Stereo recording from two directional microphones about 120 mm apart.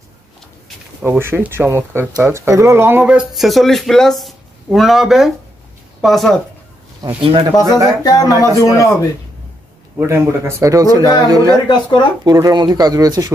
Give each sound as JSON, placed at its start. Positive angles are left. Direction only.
{"t": 1.0, "sound": "speech", "side_deg": -20}
{"t": 7.0, "sound": "speech", "side_deg": -30}
{"t": 7.5, "sound": "speech", "side_deg": 30}
{"t": 9.9, "sound": "speech", "side_deg": -20}
{"t": 11.7, "sound": "speech", "side_deg": 40}
{"t": 12.3, "sound": "speech", "side_deg": -35}